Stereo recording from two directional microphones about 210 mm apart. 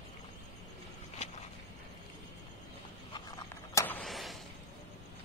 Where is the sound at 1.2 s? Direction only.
30° left (ahead or behind).